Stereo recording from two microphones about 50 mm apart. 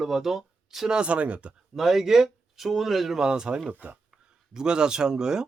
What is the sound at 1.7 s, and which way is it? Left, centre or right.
Speech, centre.